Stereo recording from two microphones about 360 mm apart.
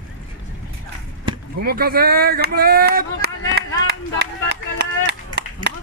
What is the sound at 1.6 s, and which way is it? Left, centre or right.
Speech, right.